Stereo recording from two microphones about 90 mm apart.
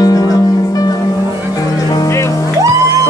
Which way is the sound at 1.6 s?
45° left (ahead or behind).